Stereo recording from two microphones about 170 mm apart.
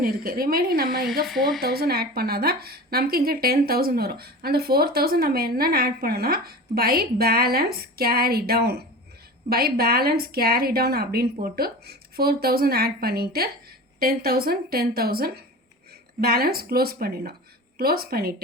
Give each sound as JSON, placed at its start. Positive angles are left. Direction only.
{"t": 0.0, "sound": "a woman's voice", "side_deg": -60}
{"t": 1.2, "sound": "speech", "side_deg": 0}
{"t": 1.6, "sound": "a woman's voice", "side_deg": -65}